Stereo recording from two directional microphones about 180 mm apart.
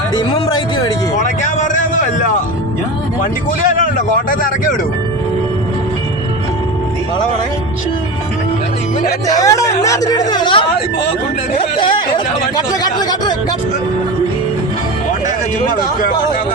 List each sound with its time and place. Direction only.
1.1 s a sound: 45° left (ahead or behind)
4.3 s speech: 50° left (ahead or behind)
9.2 s speech: 20° left (ahead or behind)